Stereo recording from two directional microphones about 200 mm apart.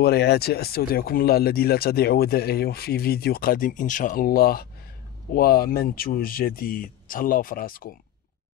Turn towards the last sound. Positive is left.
turn(degrees=45)  # may be behind; listen again after turning